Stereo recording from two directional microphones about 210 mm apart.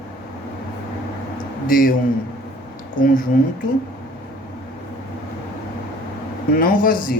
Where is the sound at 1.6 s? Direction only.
40° left (ahead or behind).